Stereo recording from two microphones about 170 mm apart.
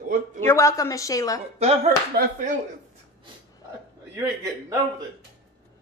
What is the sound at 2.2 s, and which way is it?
Speech, 65° right (ahead or behind).